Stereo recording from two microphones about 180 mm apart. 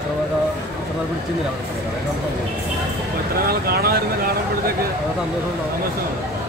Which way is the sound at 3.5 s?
60° right (ahead or behind).